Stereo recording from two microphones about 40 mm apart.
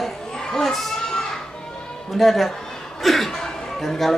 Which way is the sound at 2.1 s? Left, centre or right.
Centre.